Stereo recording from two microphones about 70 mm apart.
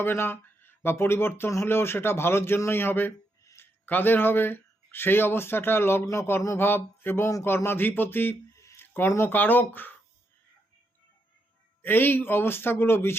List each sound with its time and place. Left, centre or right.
0.0 s a man's voice: left
8.5 s a sound: left
9.0 s speech: left
11.8 s a man's voice: left